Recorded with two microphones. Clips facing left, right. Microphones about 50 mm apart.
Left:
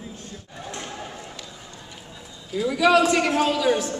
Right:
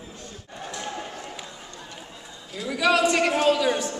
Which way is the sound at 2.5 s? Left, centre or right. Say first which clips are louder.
Left 4 dB; centre.